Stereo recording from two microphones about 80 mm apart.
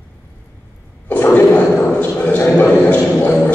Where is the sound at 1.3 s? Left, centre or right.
Left.